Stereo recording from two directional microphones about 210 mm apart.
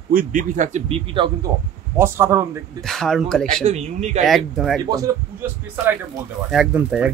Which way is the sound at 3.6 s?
30° right (ahead or behind).